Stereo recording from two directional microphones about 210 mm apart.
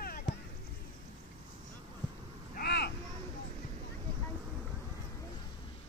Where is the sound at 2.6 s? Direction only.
50° left (ahead or behind).